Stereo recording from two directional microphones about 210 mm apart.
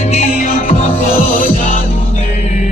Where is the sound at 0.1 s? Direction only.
30° left (ahead or behind).